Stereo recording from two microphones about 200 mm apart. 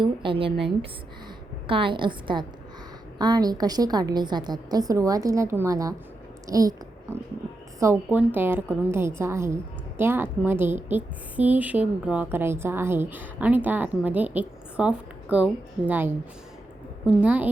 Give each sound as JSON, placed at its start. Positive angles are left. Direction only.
{"t": 0.0, "sound": "a woman's voice", "side_deg": -25}
{"t": 1.6, "sound": "a woman's voice", "side_deg": -25}